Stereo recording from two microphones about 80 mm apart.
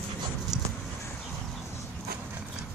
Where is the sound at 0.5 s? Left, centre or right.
Right.